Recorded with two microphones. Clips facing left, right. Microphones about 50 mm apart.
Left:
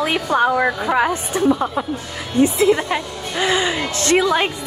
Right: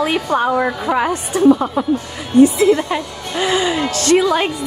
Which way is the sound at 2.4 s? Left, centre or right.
Left.